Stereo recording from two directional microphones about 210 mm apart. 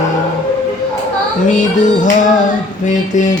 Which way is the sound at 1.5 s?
35° left (ahead or behind).